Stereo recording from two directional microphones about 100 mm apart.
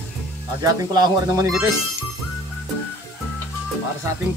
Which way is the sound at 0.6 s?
40° right (ahead or behind).